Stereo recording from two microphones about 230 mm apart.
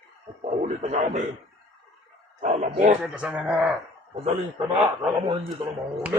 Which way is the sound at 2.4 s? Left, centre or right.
Right.